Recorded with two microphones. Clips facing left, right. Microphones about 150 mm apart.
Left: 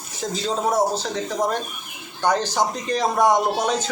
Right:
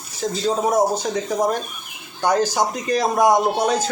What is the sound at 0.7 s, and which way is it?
Speech, 15° right (ahead or behind).